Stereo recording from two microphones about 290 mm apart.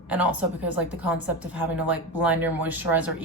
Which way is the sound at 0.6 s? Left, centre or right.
Centre.